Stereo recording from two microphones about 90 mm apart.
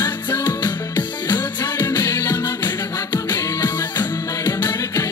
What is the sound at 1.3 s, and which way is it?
Music, 50° left (ahead or behind).